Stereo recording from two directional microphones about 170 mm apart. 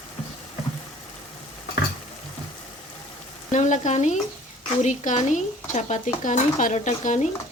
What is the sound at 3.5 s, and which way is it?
Speech, 45° left (ahead or behind).